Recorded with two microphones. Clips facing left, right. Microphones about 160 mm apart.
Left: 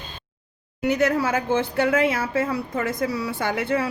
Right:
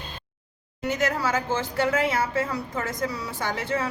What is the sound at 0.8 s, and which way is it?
A woman's voice, 60° left (ahead or behind).